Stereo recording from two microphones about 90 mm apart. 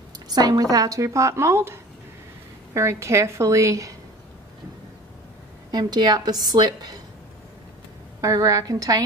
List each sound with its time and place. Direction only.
0.3 s a woman's voice: 45° right (ahead or behind)
5.7 s a woman's voice: 50° right (ahead or behind)
8.2 s a woman's voice: 40° right (ahead or behind)